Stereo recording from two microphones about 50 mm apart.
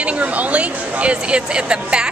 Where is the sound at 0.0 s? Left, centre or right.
Right.